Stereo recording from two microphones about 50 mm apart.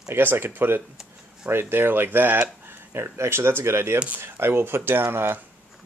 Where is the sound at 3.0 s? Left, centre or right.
Right.